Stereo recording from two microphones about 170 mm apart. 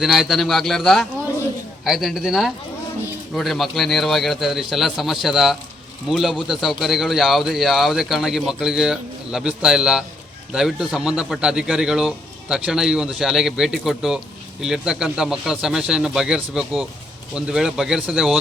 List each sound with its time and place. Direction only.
0.0 s speech: centre (ahead or behind)